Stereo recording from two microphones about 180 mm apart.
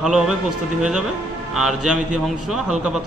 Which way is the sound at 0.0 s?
5° right (ahead or behind).